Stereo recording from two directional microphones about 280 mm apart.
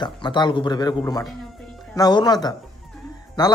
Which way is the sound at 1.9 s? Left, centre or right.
Centre.